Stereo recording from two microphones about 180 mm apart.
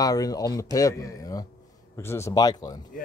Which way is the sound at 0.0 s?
20° left (ahead or behind).